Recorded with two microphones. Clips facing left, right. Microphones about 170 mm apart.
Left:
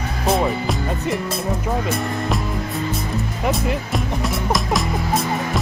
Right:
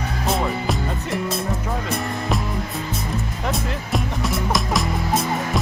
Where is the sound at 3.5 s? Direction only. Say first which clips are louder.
Left 2 dB; centre (ahead or behind).